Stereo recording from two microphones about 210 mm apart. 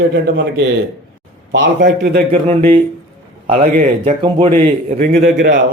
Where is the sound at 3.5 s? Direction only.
40° right (ahead or behind).